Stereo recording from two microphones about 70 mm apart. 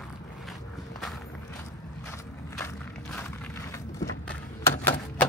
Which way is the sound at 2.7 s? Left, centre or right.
Left.